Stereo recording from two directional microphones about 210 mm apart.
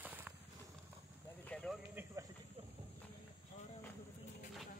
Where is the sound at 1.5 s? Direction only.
5° left (ahead or behind).